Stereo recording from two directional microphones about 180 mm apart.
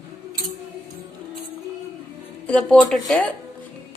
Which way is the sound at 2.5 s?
5° left (ahead or behind).